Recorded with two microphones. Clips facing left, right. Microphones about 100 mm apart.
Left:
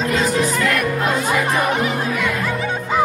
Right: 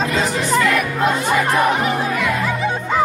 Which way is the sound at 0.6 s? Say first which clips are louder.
Right 1 dB; centre (ahead or behind).